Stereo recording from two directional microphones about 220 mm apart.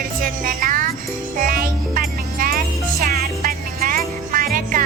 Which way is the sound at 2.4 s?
40° right (ahead or behind).